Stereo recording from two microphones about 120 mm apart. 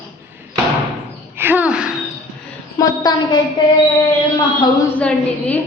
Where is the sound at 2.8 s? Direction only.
35° left (ahead or behind).